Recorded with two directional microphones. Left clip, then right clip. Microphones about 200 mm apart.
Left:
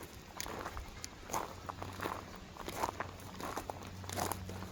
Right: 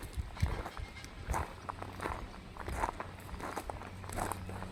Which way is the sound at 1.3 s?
10° right (ahead or behind).